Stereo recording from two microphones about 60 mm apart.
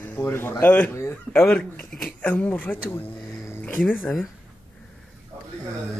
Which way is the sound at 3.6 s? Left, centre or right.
Left.